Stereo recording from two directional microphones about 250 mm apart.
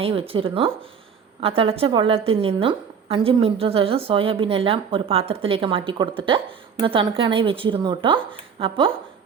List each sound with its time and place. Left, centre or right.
0.0 s a woman's voice: right